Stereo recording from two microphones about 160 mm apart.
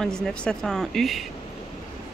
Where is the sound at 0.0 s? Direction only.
5° left (ahead or behind).